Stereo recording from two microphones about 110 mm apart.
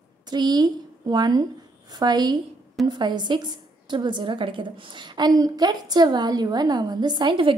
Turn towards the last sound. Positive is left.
turn(degrees=-45)  # may be behind; listen again after turning